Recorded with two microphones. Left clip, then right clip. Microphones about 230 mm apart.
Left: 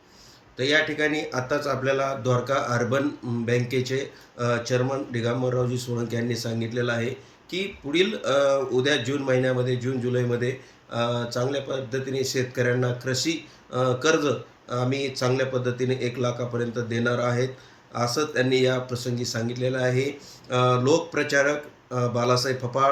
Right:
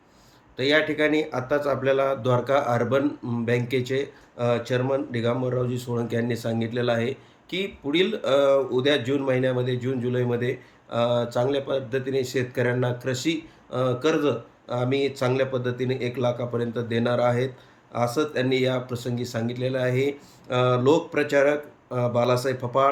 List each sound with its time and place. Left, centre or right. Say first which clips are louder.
0.5 s speech: right 1 dB; centre
5.7 s speech: right 1 dB; right
6.1 s speech: right 2 dB; centre